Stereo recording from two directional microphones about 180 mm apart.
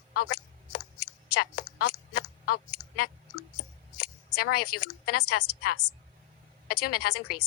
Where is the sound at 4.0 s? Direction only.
65° left (ahead or behind).